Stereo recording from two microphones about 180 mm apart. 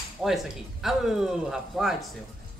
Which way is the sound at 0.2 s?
Centre (ahead or behind).